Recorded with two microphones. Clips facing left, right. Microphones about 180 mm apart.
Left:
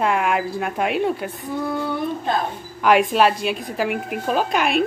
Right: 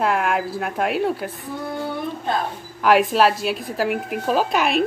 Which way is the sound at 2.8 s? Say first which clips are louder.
Even; centre (ahead or behind).